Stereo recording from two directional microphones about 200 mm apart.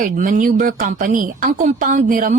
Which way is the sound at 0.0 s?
40° right (ahead or behind).